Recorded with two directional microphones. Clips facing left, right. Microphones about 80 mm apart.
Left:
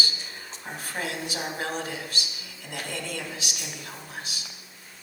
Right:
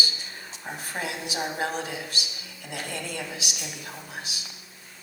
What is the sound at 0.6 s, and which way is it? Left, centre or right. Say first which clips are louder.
A woman's voice: even; centre.